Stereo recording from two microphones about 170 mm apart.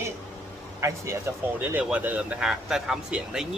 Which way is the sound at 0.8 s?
15° right (ahead or behind).